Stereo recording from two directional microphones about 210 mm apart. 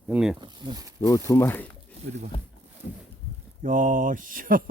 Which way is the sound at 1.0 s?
15° left (ahead or behind).